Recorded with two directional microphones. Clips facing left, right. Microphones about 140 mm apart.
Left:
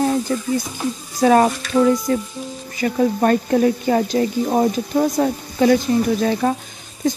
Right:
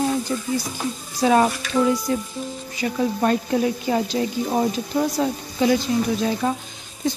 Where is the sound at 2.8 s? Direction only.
55° left (ahead or behind).